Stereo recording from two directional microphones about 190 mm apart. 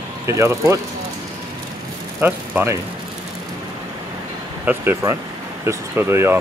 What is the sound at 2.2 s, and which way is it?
Speech, 10° right (ahead or behind).